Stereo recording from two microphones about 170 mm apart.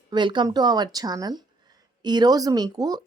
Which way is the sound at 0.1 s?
25° right (ahead or behind).